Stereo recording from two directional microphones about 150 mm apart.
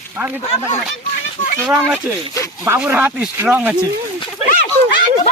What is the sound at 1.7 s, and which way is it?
Speech, 15° right (ahead or behind).